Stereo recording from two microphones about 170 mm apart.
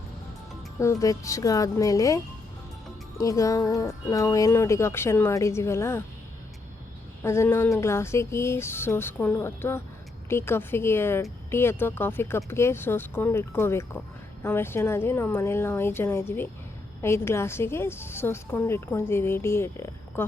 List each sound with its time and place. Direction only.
0.8 s a woman's voice: 20° left (ahead or behind)
7.2 s a woman's voice: 15° left (ahead or behind)